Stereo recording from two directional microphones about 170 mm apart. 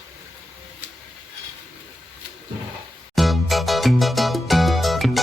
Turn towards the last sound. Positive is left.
turn(degrees=0)  # may be behind; listen again after turning